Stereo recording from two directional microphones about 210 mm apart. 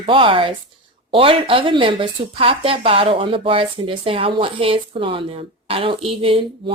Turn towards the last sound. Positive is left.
turn(degrees=-25)  # may be behind; listen again after turning